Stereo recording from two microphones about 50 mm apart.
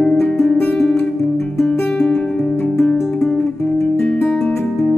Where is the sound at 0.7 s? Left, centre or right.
Centre.